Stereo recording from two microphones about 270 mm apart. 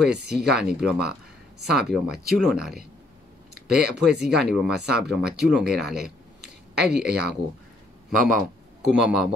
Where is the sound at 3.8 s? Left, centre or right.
Right.